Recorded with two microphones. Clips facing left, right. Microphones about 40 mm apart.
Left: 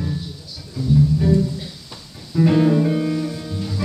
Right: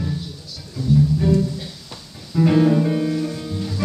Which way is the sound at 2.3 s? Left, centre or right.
Centre.